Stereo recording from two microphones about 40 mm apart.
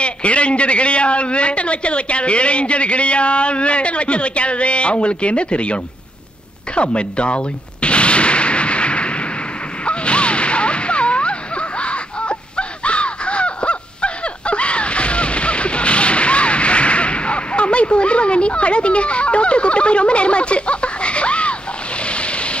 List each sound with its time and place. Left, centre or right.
0.0 s a man's voice: left
6.7 s artillery fire: left
9.8 s a sound: left